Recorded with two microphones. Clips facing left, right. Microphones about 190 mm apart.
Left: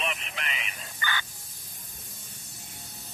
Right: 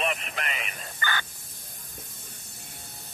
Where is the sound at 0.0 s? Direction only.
50° right (ahead or behind).